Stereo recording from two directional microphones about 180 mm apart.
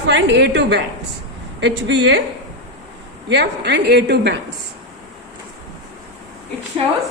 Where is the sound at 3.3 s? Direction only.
70° right (ahead or behind).